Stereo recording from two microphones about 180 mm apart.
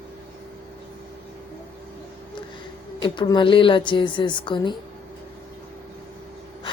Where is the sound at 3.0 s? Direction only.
25° left (ahead or behind).